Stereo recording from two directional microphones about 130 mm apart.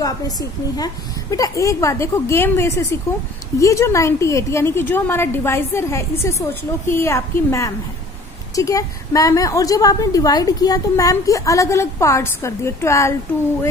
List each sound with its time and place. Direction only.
0.0 s a woman's voice: 30° left (ahead or behind)